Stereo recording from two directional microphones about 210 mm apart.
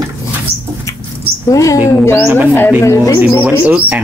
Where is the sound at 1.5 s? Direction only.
15° left (ahead or behind).